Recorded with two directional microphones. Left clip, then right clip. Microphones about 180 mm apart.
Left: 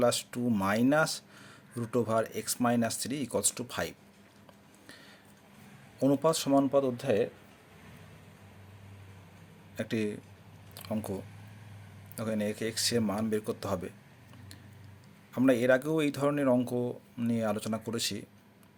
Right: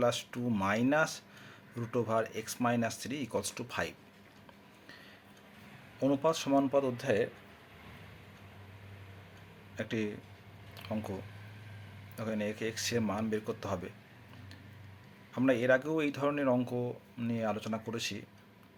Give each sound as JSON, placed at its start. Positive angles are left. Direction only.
{"t": 0.0, "sound": "speech", "side_deg": 30}
{"t": 6.0, "sound": "a man's voice", "side_deg": 35}
{"t": 9.7, "sound": "speech", "side_deg": 35}
{"t": 15.3, "sound": "speech", "side_deg": 35}